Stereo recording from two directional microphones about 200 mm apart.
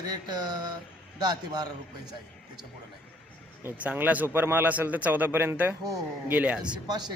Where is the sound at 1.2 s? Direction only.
20° right (ahead or behind).